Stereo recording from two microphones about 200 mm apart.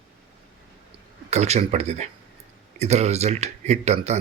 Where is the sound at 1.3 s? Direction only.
35° right (ahead or behind).